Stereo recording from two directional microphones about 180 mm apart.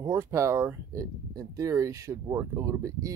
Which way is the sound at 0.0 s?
15° right (ahead or behind).